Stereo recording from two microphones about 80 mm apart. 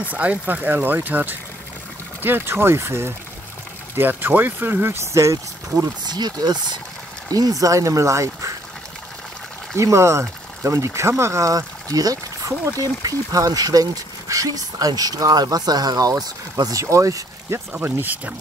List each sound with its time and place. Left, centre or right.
0.0 s speech: centre; by 5.9 s right
6.0 s speech: right
7.2 s speech: right
9.8 s speech: right
17.7 s speech: right